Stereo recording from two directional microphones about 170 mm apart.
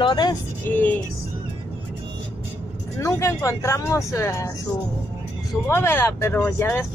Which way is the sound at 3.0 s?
20° left (ahead or behind).